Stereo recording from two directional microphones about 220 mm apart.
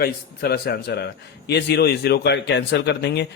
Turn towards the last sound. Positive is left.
turn(degrees=50)  # may be behind; listen again after turning